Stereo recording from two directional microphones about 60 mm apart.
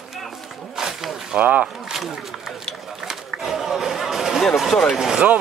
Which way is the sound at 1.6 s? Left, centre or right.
Centre.